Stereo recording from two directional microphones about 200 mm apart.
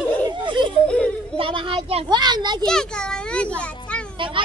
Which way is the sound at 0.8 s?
5° left (ahead or behind).